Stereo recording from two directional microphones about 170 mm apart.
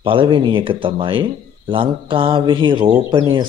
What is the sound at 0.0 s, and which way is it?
A man's voice, 30° right (ahead or behind).